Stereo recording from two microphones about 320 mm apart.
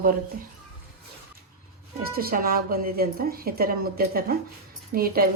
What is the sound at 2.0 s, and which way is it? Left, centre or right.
Speech, right.